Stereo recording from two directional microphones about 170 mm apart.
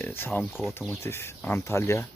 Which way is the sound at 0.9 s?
15° left (ahead or behind).